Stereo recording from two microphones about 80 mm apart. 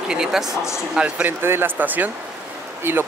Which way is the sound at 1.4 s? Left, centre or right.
Right.